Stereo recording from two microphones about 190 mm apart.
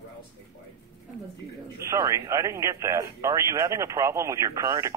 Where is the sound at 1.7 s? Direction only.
15° right (ahead or behind).